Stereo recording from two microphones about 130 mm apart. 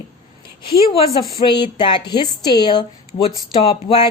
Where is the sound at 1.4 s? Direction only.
35° left (ahead or behind).